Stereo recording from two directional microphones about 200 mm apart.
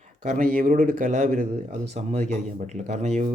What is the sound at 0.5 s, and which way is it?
Speech, 45° right (ahead or behind).